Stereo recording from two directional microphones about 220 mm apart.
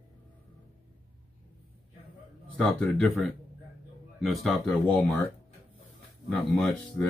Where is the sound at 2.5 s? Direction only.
5° left (ahead or behind).